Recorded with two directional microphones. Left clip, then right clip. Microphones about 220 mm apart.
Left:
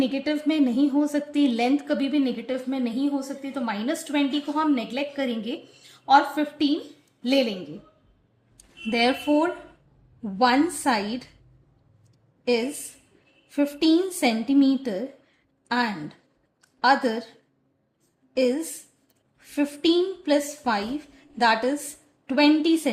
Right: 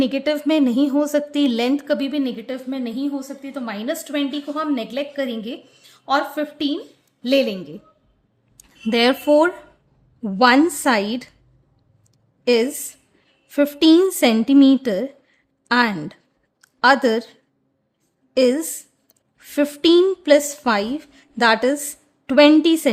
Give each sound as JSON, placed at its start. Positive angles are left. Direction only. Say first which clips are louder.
{"t": 0.0, "sound": "a woman's voice", "louder": "right 5 dB", "side_deg": -45}
{"t": 12.5, "sound": "speech", "louder": "right 7 dB", "side_deg": -40}
{"t": 16.6, "sound": "a sound", "louder": "right 5 dB", "side_deg": -45}
{"t": 18.3, "sound": "speech", "louder": "right 6 dB", "side_deg": -45}